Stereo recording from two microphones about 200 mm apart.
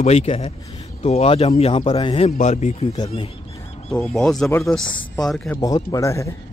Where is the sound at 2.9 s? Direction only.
25° left (ahead or behind).